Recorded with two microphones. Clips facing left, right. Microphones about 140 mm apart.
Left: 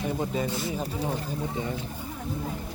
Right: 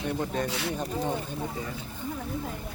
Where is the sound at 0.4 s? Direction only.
80° right.